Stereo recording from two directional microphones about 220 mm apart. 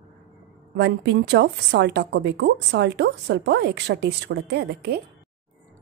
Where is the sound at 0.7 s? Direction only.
50° right (ahead or behind).